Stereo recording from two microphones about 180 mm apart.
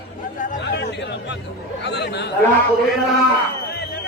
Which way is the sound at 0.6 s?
70° left (ahead or behind).